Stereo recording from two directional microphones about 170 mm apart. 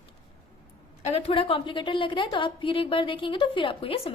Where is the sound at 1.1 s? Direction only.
35° left (ahead or behind).